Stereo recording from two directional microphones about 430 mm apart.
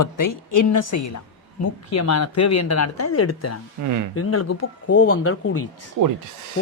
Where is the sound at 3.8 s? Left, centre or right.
Right.